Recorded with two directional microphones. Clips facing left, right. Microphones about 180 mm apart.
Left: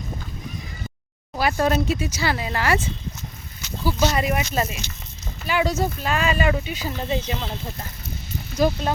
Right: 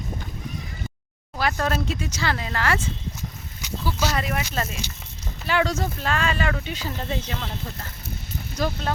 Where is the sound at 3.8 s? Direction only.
10° left (ahead or behind).